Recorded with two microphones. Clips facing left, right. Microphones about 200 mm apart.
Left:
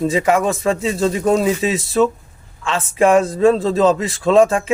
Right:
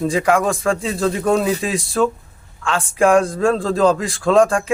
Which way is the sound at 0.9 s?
25° left (ahead or behind).